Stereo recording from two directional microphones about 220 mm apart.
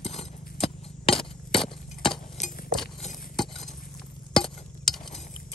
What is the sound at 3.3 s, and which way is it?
Stir, centre (ahead or behind).